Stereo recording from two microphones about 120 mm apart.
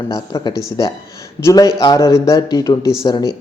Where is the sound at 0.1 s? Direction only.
30° left (ahead or behind).